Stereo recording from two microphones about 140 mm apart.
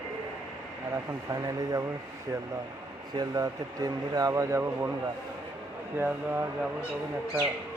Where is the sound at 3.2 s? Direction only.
25° right (ahead or behind).